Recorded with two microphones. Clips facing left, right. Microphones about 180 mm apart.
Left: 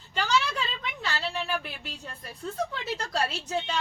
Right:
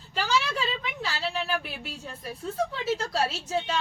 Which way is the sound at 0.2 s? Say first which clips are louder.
Even; 5° right (ahead or behind).